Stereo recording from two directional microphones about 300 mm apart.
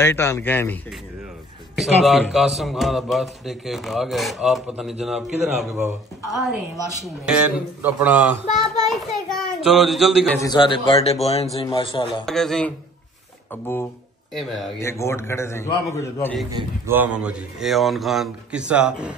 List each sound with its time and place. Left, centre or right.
0.0 s a man's voice: centre
1.8 s a man's voice: centre
7.2 s a man's voice: centre
10.4 s a man's voice: centre
12.3 s a man's voice: centre
16.5 s a man's voice: centre